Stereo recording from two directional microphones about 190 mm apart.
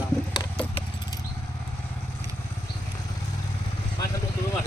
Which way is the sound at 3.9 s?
15° left (ahead or behind).